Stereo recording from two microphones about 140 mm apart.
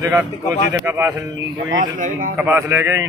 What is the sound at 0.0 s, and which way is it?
Speech, 10° right (ahead or behind).